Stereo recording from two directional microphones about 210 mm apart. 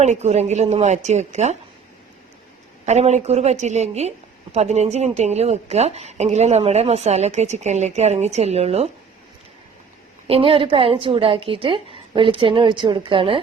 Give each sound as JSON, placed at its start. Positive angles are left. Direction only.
{"t": 0.0, "sound": "a woman's voice", "side_deg": -30}
{"t": 2.8, "sound": "a woman's voice", "side_deg": -30}
{"t": 10.2, "sound": "a woman's voice", "side_deg": -25}